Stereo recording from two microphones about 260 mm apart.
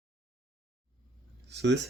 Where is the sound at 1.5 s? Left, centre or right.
Right.